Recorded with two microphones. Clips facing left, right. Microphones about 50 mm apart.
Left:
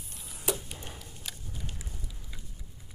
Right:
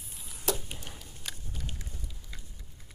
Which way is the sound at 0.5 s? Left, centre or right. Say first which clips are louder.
Even; left.